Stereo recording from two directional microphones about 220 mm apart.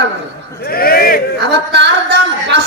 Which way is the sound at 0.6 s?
45° left (ahead or behind).